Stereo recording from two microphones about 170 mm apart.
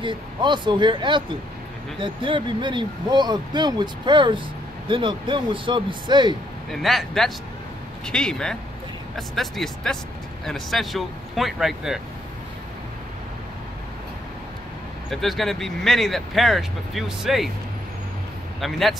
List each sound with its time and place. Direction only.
0.0 s speech: 30° right (ahead or behind)
6.7 s speech: centre (ahead or behind)
15.0 s speech: centre (ahead or behind)
18.6 s speech: centre (ahead or behind)